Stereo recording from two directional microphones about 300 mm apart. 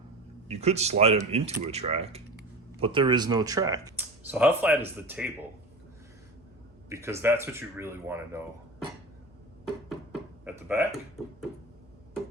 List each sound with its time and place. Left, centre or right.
0.4 s speech: right; by 5.3 s centre
6.9 s speech: centre
10.4 s a sound: centre